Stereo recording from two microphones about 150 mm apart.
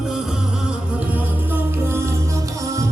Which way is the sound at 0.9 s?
10° right (ahead or behind).